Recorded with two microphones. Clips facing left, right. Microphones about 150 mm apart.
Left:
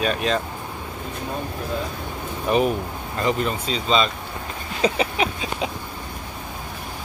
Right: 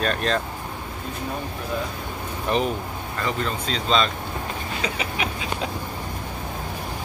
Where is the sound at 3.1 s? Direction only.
20° left (ahead or behind).